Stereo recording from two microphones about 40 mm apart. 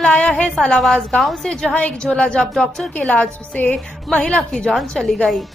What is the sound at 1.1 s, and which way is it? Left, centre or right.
Speech, centre.